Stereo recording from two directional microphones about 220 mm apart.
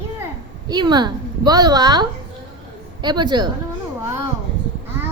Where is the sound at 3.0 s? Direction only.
20° right (ahead or behind).